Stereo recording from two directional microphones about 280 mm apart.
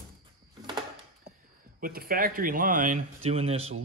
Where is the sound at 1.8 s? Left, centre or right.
Right.